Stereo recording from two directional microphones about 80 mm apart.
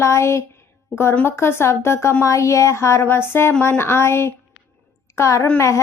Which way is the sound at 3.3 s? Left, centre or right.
Left.